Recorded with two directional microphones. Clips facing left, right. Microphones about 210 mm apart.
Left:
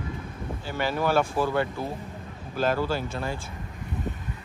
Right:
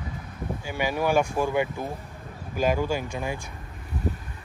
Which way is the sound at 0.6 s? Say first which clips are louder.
Even; 15° right (ahead or behind).